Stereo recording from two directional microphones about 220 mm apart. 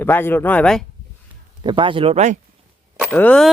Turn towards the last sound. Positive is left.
turn(degrees=5)  # may be behind; listen again after turning